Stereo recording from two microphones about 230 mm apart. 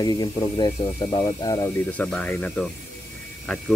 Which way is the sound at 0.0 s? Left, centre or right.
Centre.